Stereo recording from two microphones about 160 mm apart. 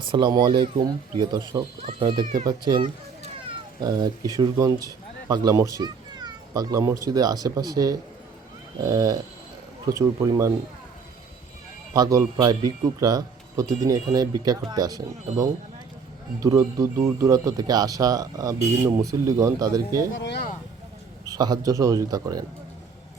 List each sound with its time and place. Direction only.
0.0 s speech: 30° right (ahead or behind)
2.2 s speech: 50° right (ahead or behind)
3.8 s speech: 25° right (ahead or behind)
11.9 s speech: 20° right (ahead or behind)
20.2 s speech: 90° left
21.2 s speech: 25° right (ahead or behind)